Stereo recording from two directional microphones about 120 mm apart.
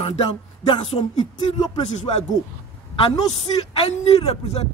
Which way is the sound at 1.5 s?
70° left (ahead or behind).